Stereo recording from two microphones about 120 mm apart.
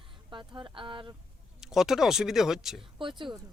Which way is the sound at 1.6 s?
5° right (ahead or behind).